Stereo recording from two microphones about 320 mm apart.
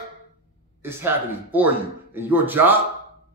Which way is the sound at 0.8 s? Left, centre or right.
Centre.